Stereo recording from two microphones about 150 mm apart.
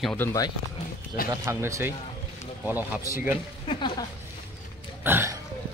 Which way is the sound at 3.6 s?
35° left (ahead or behind).